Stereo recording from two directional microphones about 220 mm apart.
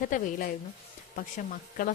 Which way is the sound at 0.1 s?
35° left (ahead or behind).